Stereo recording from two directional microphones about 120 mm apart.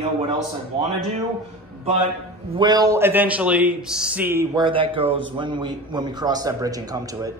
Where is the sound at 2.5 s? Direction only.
35° right (ahead or behind).